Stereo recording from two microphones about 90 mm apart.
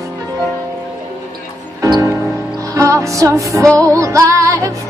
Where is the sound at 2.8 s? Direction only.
35° right (ahead or behind).